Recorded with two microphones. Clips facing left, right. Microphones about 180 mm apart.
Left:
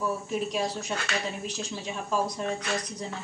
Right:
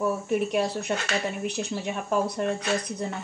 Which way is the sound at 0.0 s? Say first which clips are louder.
Right 4 dB; 60° right (ahead or behind).